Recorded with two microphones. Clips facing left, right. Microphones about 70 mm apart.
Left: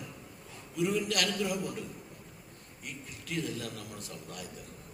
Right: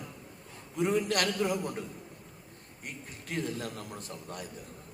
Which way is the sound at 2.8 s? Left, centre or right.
Right.